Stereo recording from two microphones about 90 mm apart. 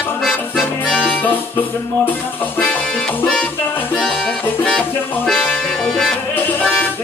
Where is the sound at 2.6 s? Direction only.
15° left (ahead or behind).